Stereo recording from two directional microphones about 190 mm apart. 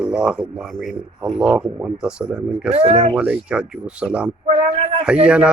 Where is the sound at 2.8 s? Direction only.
30° right (ahead or behind).